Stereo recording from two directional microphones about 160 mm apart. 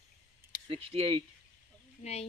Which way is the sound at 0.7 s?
35° right (ahead or behind).